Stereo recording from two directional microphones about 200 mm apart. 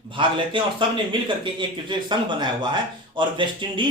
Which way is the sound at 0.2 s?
25° right (ahead or behind).